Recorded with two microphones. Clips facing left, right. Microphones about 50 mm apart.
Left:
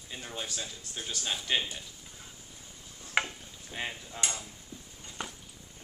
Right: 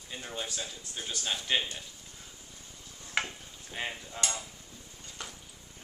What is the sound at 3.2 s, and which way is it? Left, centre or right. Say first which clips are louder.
Stir: even; centre.